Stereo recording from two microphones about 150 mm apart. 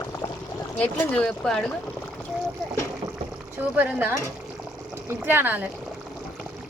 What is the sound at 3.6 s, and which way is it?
Speech, 10° right (ahead or behind).